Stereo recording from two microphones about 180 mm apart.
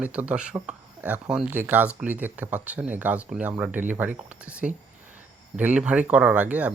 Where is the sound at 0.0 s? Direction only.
5° right (ahead or behind).